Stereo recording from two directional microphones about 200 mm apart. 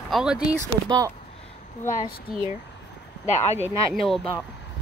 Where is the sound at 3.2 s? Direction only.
35° left (ahead or behind).